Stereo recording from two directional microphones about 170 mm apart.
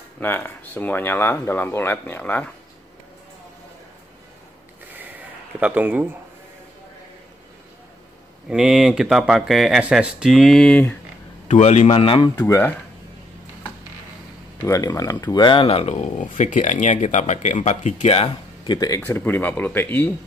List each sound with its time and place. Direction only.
0.2 s speech: 10° left (ahead or behind)
5.6 s speech: 10° right (ahead or behind)
8.5 s speech: 5° right (ahead or behind)
11.4 s speech: 40° left (ahead or behind)
12.4 s speech: 10° left (ahead or behind)
14.6 s speech: 15° left (ahead or behind)
18.9 s speech: 10° left (ahead or behind)